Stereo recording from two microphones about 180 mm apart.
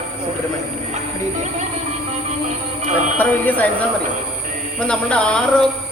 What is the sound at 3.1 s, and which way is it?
Speech, 10° left (ahead or behind).